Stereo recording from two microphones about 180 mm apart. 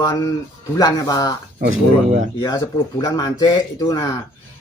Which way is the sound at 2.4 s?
25° left (ahead or behind).